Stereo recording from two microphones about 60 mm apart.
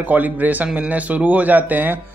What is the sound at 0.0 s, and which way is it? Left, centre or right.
Speech, right.